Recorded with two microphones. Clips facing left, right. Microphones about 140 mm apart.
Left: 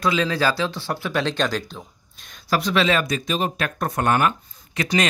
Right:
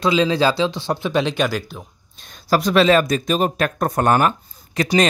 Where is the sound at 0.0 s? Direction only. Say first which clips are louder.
Right 4 dB; 20° right (ahead or behind).